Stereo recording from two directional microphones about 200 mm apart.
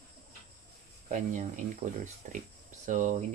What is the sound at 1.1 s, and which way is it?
Speech, 40° right (ahead or behind).